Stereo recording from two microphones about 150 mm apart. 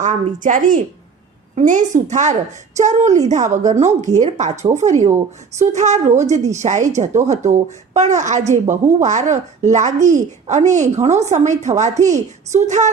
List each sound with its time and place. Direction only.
0.0 s a woman's voice: 55° right (ahead or behind)